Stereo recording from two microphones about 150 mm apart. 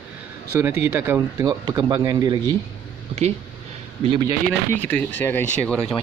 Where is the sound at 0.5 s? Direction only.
15° right (ahead or behind).